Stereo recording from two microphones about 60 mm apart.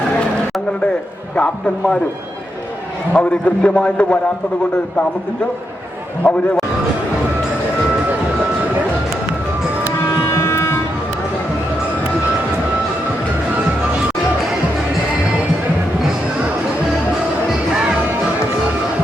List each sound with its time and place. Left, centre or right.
1.4 s a man's voice: centre
3.1 s a man's voice: centre
6.2 s a man's voice: left
10.2 s a sound: left